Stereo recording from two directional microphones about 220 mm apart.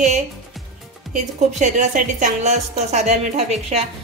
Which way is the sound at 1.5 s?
30° right (ahead or behind).